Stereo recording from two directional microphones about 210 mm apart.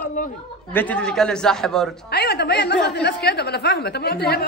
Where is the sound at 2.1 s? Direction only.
50° left (ahead or behind).